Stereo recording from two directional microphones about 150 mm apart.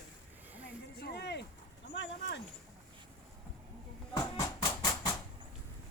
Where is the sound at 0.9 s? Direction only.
90° left.